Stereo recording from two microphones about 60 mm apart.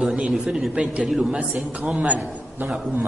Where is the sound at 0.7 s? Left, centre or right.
Right.